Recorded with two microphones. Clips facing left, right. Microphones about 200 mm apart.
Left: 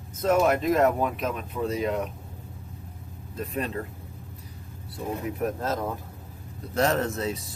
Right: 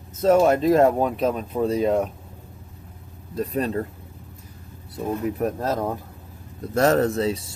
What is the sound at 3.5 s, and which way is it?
Speech, 40° right (ahead or behind).